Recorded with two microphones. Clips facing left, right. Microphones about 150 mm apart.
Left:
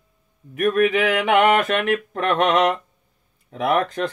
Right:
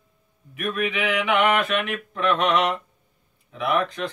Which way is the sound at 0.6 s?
45° left (ahead or behind).